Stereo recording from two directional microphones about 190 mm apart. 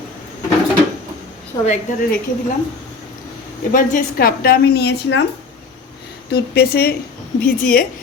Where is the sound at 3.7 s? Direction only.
45° left (ahead or behind); by 5.2 s 65° left (ahead or behind).